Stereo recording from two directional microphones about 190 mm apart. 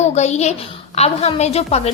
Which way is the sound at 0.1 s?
35° left (ahead or behind).